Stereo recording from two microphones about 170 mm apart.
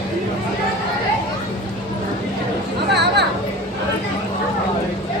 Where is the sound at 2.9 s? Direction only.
80° right.